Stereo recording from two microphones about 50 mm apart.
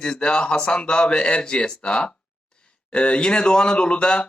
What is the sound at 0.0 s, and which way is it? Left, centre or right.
Speech, centre.